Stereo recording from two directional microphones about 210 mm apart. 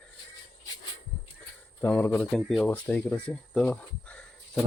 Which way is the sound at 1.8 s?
5° left (ahead or behind).